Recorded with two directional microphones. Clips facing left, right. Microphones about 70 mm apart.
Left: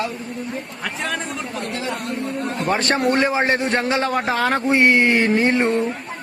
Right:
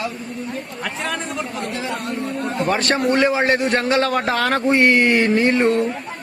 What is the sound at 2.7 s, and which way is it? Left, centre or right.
Speech, left.